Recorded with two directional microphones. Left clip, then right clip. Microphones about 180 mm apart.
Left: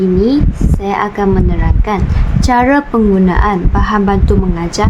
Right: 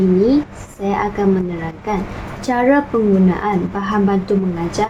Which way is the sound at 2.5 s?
20° left (ahead or behind).